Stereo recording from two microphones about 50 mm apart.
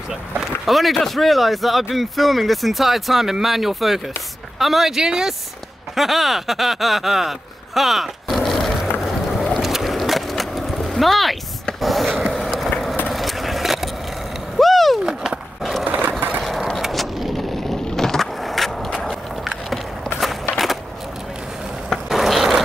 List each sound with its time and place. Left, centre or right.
0.7 s speech: centre
9.0 s skateboard: centre
11.8 s a sound: centre
13.1 s vehicle: centre
14.6 s skateboard: centre
15.8 s sewing machine: right
16.4 s a sound: centre
16.8 s vehicle: centre
17.8 s skateboard: centre
20.5 s skateboard: centre
22.1 s vehicle: centre